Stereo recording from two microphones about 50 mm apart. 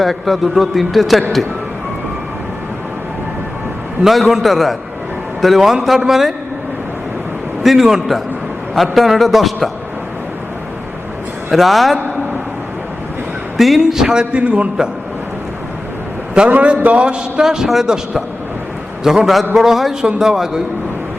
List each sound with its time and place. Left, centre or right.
0.0 s a man's voice: centre
4.0 s a man's voice: centre
7.6 s a man's voice: centre
11.5 s a man's voice: centre
13.6 s a man's voice: centre
16.5 s a man's voice: right
17.4 s a man's voice: centre